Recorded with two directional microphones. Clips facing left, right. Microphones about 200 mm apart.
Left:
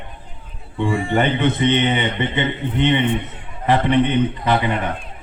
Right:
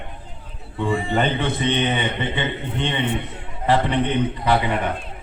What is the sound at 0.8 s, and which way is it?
Speech, 20° right (ahead or behind).